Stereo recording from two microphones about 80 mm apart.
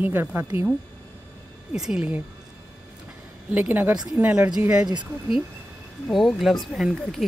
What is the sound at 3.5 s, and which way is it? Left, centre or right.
A woman's voice, right.